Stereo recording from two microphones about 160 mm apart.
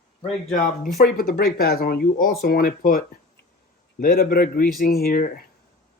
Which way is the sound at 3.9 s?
65° left (ahead or behind).